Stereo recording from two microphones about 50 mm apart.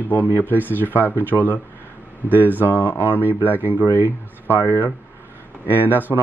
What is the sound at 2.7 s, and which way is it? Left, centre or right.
Speech, left.